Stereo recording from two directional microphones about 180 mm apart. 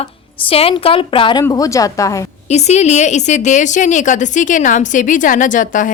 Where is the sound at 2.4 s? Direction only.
40° left (ahead or behind).